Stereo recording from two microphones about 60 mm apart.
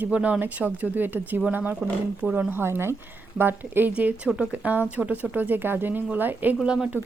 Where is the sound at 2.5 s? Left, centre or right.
Right.